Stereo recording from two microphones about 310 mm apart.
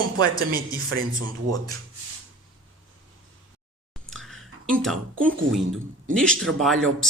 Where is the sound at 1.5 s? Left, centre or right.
Centre.